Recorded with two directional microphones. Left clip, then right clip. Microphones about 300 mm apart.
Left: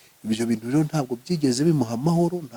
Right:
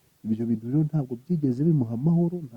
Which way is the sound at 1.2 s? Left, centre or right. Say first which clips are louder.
Left 4 dB; centre.